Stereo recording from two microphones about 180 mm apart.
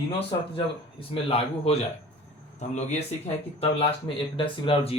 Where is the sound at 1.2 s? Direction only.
35° left (ahead or behind).